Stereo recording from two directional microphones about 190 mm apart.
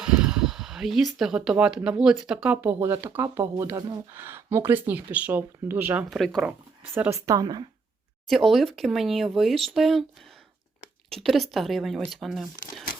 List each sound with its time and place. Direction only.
0.0 s speech: 5° right (ahead or behind); by 4.0 s 20° right (ahead or behind)
4.1 s speech: 10° right (ahead or behind)
6.1 s speech: centre (ahead or behind)
6.9 s speech: 15° right (ahead or behind)
8.3 s speech: centre (ahead or behind)
11.1 s speech: centre (ahead or behind)